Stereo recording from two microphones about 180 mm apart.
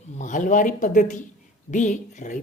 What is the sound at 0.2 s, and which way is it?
A woman's voice, 45° left (ahead or behind).